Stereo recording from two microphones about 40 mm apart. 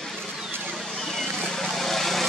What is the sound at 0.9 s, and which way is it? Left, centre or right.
Vehicle, centre.